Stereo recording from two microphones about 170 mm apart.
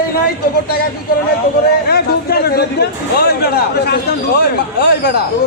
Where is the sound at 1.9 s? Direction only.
65° left (ahead or behind).